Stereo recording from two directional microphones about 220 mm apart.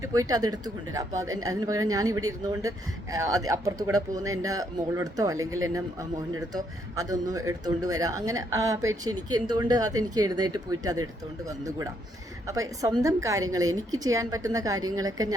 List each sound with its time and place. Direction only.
0.0 s a man's voice: 15° right (ahead or behind)